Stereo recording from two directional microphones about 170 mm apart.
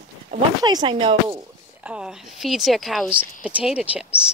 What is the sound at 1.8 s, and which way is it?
A woman's voice, 5° right (ahead or behind).